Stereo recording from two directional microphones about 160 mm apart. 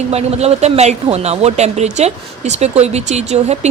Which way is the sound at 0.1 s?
40° right (ahead or behind).